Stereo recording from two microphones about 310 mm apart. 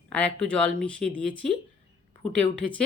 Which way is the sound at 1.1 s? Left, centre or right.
Right.